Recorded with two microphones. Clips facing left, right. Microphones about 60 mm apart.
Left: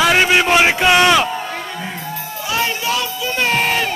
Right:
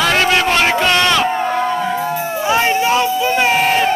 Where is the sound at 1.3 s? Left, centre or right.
Right.